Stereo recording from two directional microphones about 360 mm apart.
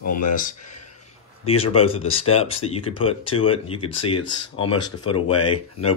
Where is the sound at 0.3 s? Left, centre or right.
Left.